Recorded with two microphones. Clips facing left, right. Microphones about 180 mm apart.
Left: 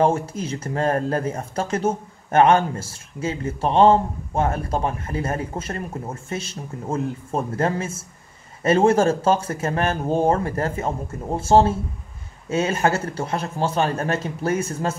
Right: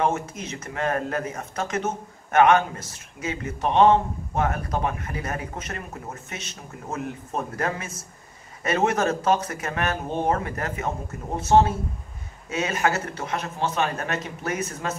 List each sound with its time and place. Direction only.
0.0 s speech: 30° left (ahead or behind)